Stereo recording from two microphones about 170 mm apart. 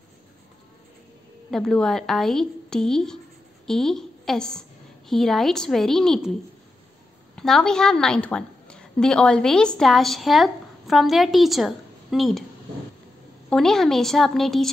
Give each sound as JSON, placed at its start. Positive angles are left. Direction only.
{"t": 1.5, "sound": "a woman's voice", "side_deg": 5}
{"t": 7.3, "sound": "a woman's voice", "side_deg": 5}
{"t": 13.5, "sound": "a woman's voice", "side_deg": 5}